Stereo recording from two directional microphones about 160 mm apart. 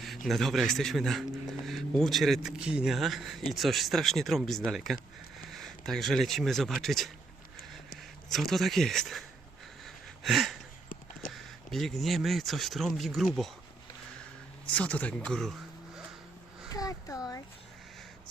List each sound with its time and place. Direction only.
0.3 s speech: centre (ahead or behind)
8.3 s speech: centre (ahead or behind)
9.8 s a sound: centre (ahead or behind)
11.3 s speech: centre (ahead or behind)
14.8 s speech: 10° left (ahead or behind)
16.7 s speech: 20° left (ahead or behind)